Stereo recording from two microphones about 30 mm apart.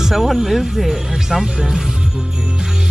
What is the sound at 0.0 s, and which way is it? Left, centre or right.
Speech, centre.